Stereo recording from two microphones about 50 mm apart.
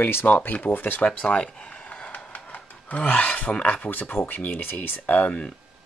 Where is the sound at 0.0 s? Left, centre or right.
Left.